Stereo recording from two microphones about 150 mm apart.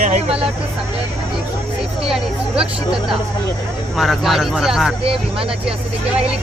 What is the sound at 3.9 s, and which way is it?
Speech, centre (ahead or behind).